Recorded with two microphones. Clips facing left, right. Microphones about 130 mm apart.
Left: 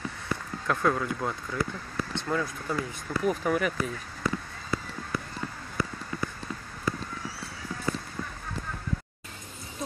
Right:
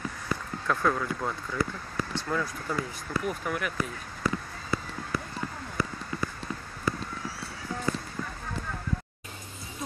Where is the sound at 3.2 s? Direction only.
40° left (ahead or behind).